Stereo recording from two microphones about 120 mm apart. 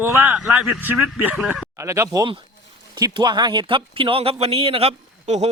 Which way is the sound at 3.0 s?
35° right (ahead or behind).